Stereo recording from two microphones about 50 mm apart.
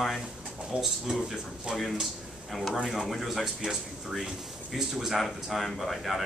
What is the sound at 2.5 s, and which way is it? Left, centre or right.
Speech, centre.